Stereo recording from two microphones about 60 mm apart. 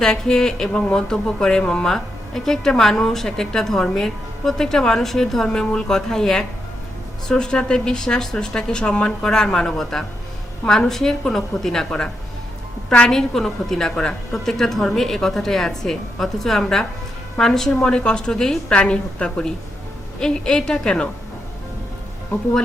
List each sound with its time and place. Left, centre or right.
0.0 s speech: centre